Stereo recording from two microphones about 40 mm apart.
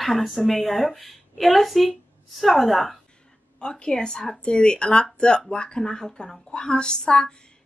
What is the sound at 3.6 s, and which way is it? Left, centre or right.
Speech, centre.